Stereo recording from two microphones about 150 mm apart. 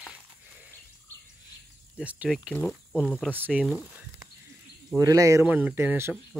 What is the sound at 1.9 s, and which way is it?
Speech, 10° right (ahead or behind).